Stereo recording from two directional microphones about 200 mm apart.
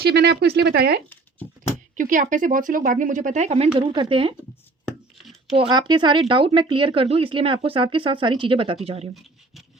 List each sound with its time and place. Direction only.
0.0 s speech: 55° right (ahead or behind)
2.0 s speech: 40° right (ahead or behind)
5.1 s a sound: centre (ahead or behind)
5.5 s speech: 20° right (ahead or behind)